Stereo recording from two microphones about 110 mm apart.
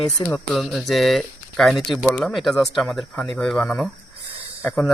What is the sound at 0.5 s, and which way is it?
Speech, 5° right (ahead or behind).